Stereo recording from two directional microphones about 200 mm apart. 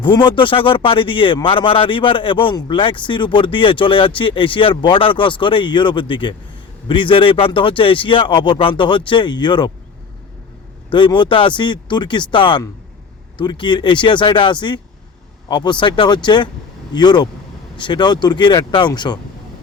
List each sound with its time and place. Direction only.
0.0 s speech: 25° left (ahead or behind)
10.9 s speech: 25° left (ahead or behind)